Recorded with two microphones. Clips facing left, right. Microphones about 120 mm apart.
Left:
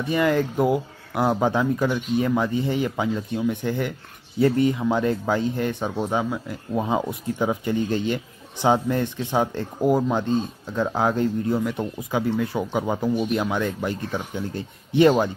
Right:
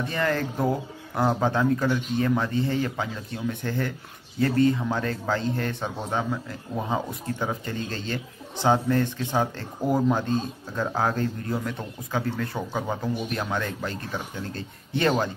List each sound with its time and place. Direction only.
0.0 s a man's voice: 15° left (ahead or behind)
10.1 s a man's voice: 15° left (ahead or behind)